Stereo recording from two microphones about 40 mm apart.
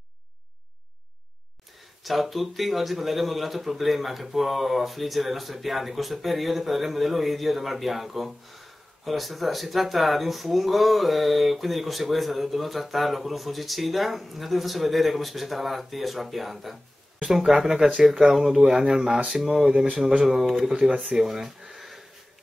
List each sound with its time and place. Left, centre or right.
2.0 s speech: centre
17.4 s speech: right
20.2 s speech: centre
21.1 s a sound: centre